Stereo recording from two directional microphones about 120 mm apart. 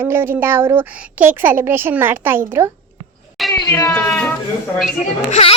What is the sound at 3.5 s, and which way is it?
Speech, 25° left (ahead or behind).